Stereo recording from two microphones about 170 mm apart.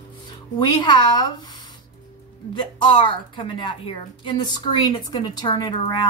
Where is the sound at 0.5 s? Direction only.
25° left (ahead or behind).